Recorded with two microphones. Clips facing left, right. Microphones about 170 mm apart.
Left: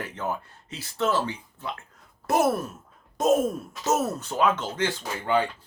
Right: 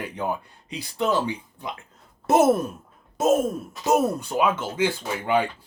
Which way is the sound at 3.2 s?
Centre (ahead or behind).